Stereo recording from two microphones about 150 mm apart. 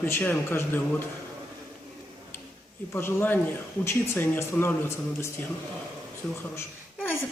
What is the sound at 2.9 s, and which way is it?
A man's voice, 15° left (ahead or behind).